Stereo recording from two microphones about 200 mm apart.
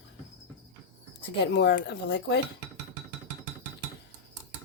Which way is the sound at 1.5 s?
60° left (ahead or behind).